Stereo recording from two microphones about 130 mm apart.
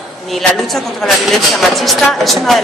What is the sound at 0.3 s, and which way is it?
A woman's voice, centre (ahead or behind).